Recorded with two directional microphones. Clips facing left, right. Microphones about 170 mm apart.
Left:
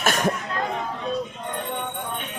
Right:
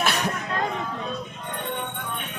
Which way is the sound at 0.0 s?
45° left (ahead or behind).